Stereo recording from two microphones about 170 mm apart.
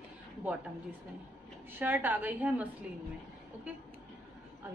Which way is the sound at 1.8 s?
10° right (ahead or behind).